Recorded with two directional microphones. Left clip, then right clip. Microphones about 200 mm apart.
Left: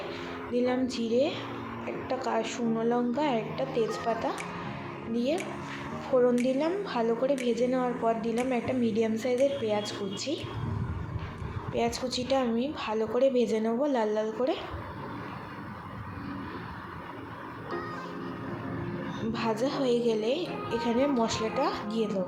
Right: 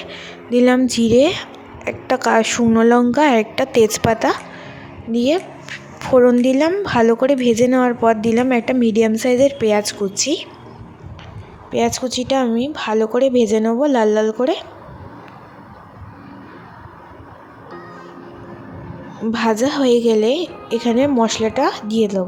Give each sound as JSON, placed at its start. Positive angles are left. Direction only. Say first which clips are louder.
{"t": 0.5, "sound": "a woman's voice", "louder": "right 14 dB", "side_deg": -55}
{"t": 11.7, "sound": "a woman's voice", "louder": "right 11 dB", "side_deg": -50}
{"t": 19.3, "sound": "a woman's voice", "louder": "right 13 dB", "side_deg": -50}